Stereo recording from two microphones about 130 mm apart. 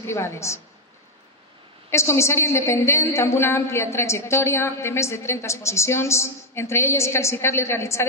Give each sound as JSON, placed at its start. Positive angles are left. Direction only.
{"t": 0.0, "sound": "a woman's voice", "side_deg": 20}
{"t": 1.9, "sound": "a woman's voice", "side_deg": 20}